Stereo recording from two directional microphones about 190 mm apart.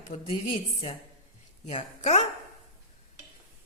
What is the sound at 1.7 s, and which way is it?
Speech, 35° left (ahead or behind).